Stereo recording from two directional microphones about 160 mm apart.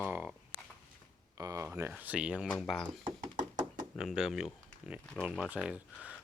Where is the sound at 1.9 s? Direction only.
10° right (ahead or behind).